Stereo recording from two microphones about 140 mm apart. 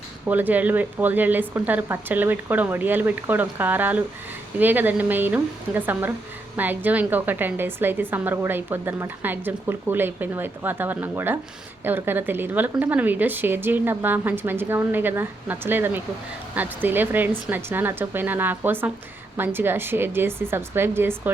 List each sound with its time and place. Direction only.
0.3 s a woman's voice: 10° right (ahead or behind)